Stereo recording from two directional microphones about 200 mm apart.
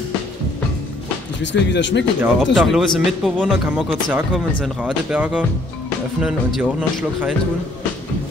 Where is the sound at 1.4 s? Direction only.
60° left (ahead or behind).